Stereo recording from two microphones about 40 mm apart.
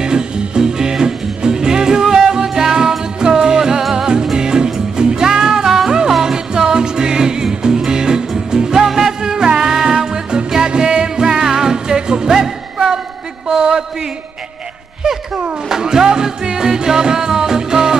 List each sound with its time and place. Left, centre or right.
0.0 s music: centre
13.5 s a sound: centre
15.7 s music: centre